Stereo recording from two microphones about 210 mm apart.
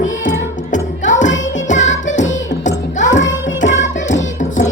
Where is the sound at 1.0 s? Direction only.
35° left (ahead or behind).